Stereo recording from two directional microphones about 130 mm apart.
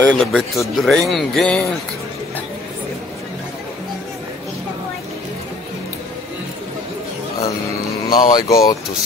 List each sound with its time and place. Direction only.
0.0 s speech: 10° left (ahead or behind)
8.1 s speech: 30° left (ahead or behind)